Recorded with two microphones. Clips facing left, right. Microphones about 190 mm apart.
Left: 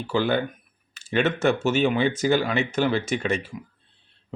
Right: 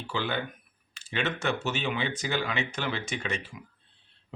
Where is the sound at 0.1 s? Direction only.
45° left (ahead or behind).